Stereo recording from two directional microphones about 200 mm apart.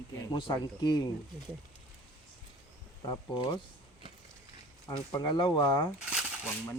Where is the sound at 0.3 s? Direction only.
20° left (ahead or behind).